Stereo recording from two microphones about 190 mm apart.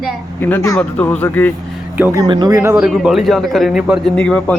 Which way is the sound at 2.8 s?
Centre (ahead or behind).